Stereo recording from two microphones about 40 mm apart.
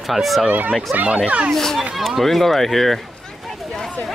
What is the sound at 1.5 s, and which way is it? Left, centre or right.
Speech, centre.